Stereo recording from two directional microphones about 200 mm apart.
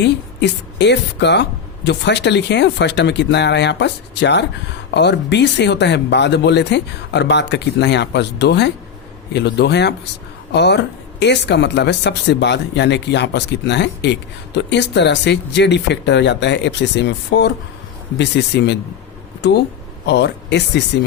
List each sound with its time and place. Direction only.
0.0 s speech: 60° left (ahead or behind)